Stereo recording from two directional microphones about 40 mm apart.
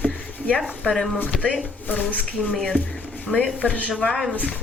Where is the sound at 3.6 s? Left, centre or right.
Left.